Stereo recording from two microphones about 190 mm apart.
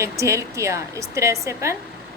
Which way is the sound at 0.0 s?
15° right (ahead or behind).